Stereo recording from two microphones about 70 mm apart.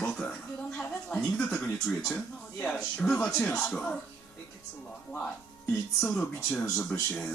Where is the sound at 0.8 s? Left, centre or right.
Centre.